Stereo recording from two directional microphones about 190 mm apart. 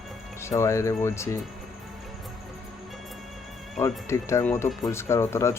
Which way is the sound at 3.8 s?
15° left (ahead or behind).